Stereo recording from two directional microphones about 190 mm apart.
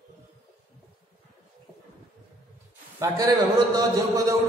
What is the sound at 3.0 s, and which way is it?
A man's voice, 20° right (ahead or behind).